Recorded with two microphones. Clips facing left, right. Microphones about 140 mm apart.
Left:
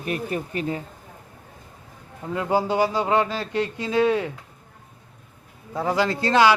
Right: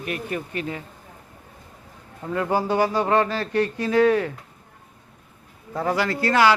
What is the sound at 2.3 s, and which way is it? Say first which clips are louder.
Speech: even; 15° left (ahead or behind).